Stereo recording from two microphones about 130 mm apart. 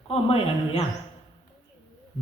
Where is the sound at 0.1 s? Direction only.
45° left (ahead or behind).